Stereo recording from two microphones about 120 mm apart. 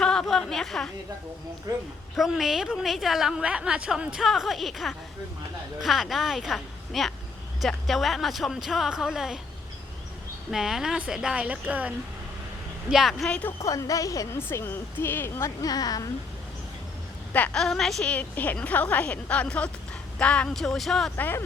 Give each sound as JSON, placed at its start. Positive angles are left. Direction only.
{"t": 0.0, "sound": "a woman's voice", "side_deg": 5}
{"t": 2.1, "sound": "a woman's voice", "side_deg": 0}
{"t": 10.5, "sound": "a woman's voice", "side_deg": -5}
{"t": 12.9, "sound": "a woman's voice", "side_deg": 0}
{"t": 13.6, "sound": "speech", "side_deg": 25}
{"t": 17.3, "sound": "a woman's voice", "side_deg": 10}
{"t": 21.2, "sound": "a woman's voice", "side_deg": 15}